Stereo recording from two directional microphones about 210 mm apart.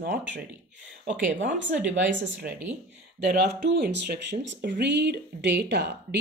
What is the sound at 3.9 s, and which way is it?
Speech, 55° right (ahead or behind).